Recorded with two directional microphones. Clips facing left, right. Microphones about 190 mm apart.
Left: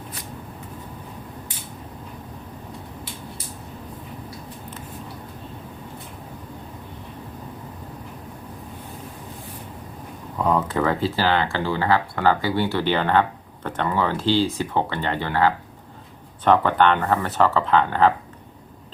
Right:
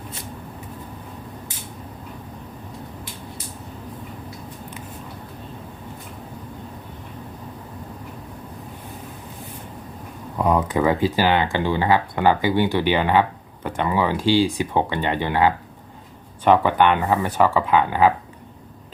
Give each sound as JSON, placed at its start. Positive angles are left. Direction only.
{"t": 10.3, "sound": "speech", "side_deg": -10}